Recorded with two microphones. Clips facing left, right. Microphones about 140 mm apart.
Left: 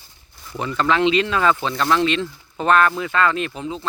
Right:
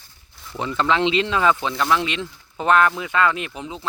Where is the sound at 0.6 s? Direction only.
20° right (ahead or behind).